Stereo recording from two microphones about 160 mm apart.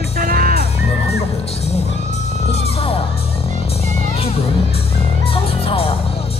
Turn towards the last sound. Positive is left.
turn(degrees=35)  # may be behind; listen again after turning